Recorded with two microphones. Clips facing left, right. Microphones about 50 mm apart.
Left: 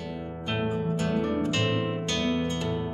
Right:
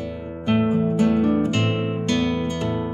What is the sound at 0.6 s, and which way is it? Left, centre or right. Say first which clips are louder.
Music: right 7 dB; right.